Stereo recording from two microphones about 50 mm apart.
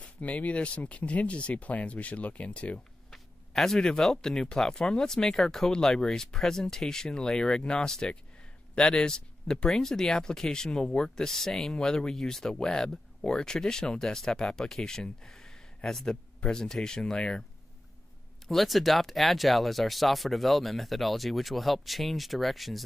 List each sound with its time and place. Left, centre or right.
0.0 s speech: left
3.1 s a sound: centre
4.0 s speech: centre
18.5 s speech: centre